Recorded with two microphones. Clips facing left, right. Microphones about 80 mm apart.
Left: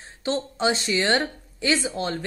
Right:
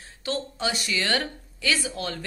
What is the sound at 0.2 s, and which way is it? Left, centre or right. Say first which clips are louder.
A woman's voice: left 4 dB; left.